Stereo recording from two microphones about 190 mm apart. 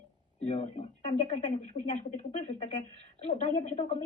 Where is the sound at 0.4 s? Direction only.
35° left (ahead or behind).